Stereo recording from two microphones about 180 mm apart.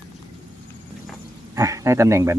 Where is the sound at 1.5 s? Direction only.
20° right (ahead or behind).